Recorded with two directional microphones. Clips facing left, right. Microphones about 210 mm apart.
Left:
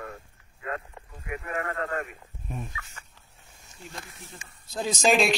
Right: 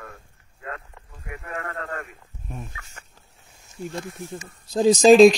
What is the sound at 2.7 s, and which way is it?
Speech, 50° right (ahead or behind).